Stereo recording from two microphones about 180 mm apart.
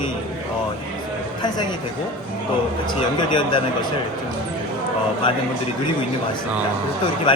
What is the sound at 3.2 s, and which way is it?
Speech, 25° left (ahead or behind).